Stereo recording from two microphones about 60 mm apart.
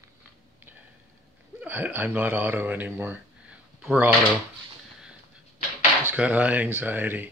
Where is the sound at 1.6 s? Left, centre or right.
Right.